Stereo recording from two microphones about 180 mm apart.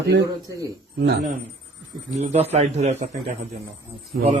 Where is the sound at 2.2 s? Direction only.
35° right (ahead or behind).